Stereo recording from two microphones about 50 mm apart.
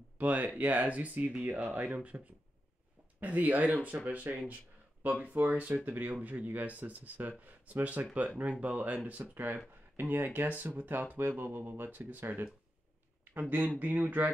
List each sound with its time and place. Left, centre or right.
0.2 s speech: right
3.2 s speech: right
13.2 s a sound: right
13.7 s speech: right